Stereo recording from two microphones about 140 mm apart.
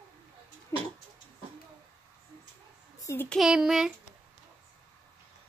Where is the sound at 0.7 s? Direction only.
20° left (ahead or behind).